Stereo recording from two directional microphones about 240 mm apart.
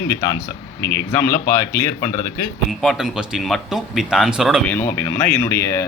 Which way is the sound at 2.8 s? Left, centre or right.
Centre.